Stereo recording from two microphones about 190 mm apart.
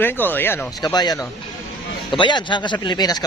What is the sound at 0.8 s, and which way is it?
Speech, 20° left (ahead or behind).